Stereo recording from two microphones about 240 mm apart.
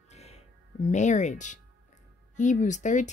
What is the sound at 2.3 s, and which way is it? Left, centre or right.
Speech, left.